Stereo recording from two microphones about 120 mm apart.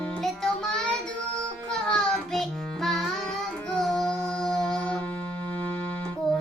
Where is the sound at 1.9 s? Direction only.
5° left (ahead or behind).